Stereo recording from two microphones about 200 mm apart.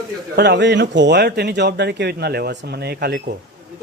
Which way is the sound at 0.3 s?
55° right (ahead or behind).